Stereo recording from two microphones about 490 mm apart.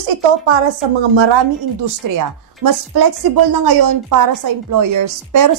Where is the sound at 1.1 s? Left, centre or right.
Right.